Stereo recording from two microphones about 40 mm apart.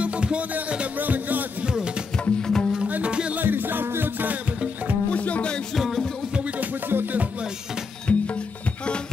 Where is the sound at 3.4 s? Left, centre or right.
Right.